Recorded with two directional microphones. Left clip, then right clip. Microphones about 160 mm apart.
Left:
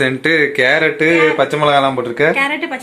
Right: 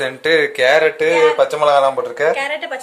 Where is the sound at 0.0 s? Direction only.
10° right (ahead or behind).